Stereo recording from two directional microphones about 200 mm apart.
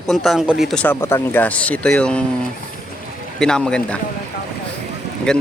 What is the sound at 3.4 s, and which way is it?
Speech, 5° left (ahead or behind).